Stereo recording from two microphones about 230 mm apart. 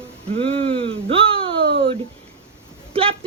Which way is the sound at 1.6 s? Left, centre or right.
Right.